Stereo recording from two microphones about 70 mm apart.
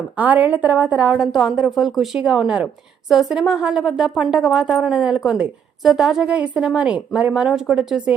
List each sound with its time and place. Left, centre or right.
0.2 s a woman's voice: right
1.2 s a woman's voice: centre
7.4 s a woman's voice: centre